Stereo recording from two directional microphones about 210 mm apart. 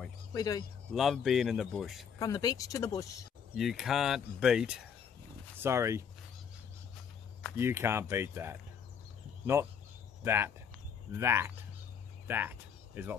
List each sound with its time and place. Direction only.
0.3 s speech: 15° left (ahead or behind)
0.9 s speech: centre (ahead or behind)
2.1 s speech: 15° left (ahead or behind)
3.5 s speech: centre (ahead or behind)
5.6 s speech: 15° right (ahead or behind)
7.5 s speech: 10° right (ahead or behind)
10.2 s speech: 10° right (ahead or behind)